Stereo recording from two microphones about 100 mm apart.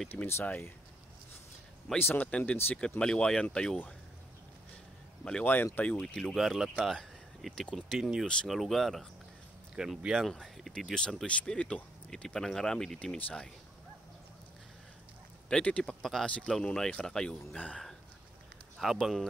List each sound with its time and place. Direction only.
0.1 s speech: 20° left (ahead or behind)
2.0 s speech: 20° left (ahead or behind)
5.2 s speech: 10° left (ahead or behind)
8.3 s speech: 10° left (ahead or behind)
15.5 s speech: 10° left (ahead or behind)
18.8 s speech: centre (ahead or behind)